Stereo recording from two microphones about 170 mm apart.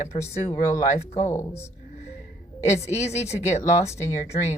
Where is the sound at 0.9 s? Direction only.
40° left (ahead or behind).